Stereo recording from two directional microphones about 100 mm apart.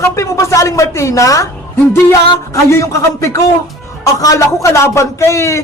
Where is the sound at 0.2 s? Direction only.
30° left (ahead or behind).